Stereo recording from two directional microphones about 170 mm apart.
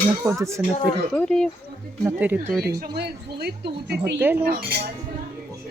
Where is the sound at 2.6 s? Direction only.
70° right (ahead or behind).